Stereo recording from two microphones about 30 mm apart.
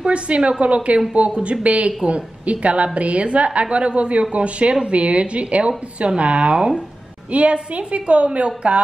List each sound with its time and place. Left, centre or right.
0.0 s a woman's voice: right